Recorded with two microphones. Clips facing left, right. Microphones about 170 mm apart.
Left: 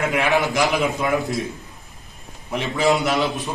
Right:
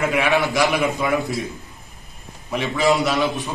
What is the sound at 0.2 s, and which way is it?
Speech, 20° left (ahead or behind).